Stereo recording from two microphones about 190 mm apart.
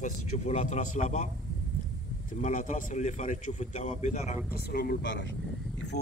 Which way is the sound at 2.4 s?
40° left (ahead or behind).